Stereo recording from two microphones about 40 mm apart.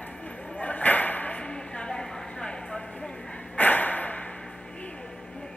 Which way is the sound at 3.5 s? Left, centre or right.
Left.